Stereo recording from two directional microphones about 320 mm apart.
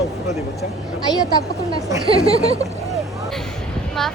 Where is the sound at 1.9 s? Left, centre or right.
Centre.